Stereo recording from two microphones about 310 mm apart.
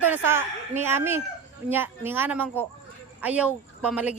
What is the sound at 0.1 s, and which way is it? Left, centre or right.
Speech, centre.